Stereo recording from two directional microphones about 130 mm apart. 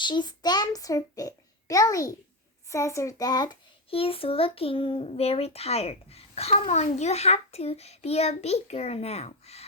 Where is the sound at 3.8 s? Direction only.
45° left (ahead or behind).